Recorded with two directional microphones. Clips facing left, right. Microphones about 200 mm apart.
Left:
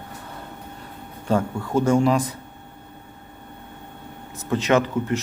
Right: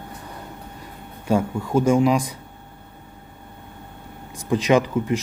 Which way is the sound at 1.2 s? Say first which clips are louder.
Right 1 dB; 10° right (ahead or behind).